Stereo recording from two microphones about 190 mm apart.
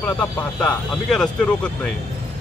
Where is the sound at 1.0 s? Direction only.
5° left (ahead or behind).